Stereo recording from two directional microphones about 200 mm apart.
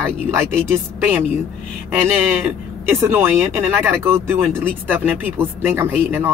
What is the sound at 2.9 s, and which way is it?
Speech, 10° right (ahead or behind).